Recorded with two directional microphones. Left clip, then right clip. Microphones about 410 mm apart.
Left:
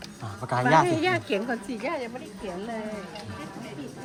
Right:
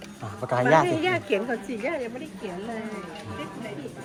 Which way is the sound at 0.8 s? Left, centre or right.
Left.